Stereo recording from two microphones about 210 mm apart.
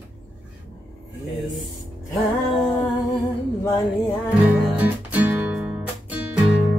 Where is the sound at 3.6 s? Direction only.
15° left (ahead or behind).